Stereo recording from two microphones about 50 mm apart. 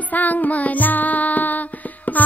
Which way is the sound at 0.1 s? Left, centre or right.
Left.